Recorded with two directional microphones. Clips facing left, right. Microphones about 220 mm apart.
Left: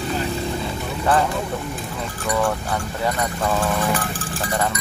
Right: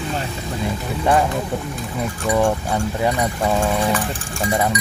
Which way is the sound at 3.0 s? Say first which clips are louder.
Right 2 dB; 10° right (ahead or behind).